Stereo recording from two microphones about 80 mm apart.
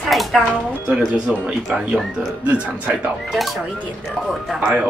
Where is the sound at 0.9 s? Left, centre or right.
Centre.